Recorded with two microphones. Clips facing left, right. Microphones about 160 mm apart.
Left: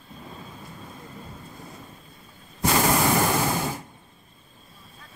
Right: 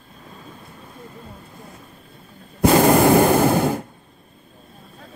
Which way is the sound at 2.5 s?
55° right (ahead or behind).